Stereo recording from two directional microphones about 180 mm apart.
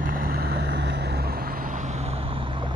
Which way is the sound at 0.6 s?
70° right (ahead or behind).